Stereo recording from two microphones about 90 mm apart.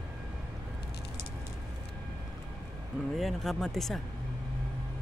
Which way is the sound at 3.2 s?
Centre (ahead or behind).